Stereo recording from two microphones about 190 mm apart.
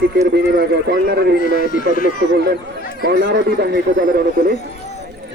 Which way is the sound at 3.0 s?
60° right (ahead or behind).